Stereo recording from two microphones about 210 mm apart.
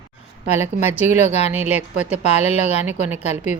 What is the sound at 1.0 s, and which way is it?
Speech, 30° left (ahead or behind).